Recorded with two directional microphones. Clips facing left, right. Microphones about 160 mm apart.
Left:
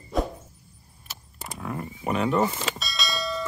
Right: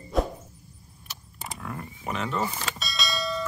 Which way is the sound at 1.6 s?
15° left (ahead or behind).